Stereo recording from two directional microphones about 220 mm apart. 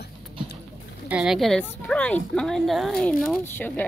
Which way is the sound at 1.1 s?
5° right (ahead or behind).